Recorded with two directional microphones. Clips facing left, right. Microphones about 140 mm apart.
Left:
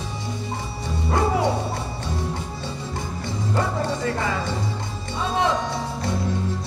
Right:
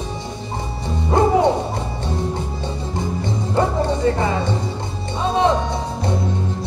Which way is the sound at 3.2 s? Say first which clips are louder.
Right 4 dB; 20° right (ahead or behind).